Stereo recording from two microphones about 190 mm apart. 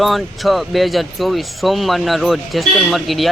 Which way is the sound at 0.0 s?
Centre (ahead or behind).